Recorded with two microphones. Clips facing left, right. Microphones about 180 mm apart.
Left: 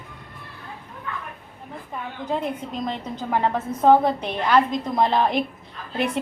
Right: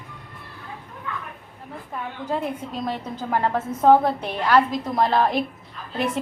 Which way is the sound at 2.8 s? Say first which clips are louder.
Right 1 dB; 5° right (ahead or behind).